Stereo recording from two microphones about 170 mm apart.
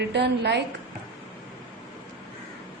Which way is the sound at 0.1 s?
85° right.